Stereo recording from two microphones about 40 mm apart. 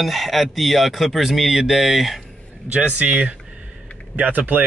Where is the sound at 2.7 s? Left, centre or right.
Right.